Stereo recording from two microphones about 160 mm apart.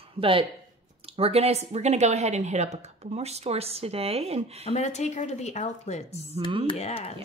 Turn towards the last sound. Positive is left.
turn(degrees=40)  # may be behind; listen again after turning